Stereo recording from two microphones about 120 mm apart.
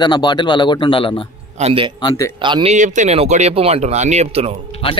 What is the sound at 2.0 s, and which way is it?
Speech, 30° left (ahead or behind).